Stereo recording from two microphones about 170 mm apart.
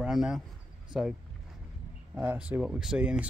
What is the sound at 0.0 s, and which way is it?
Speech, centre (ahead or behind).